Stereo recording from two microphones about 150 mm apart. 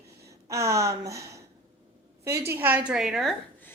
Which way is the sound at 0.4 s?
20° right (ahead or behind).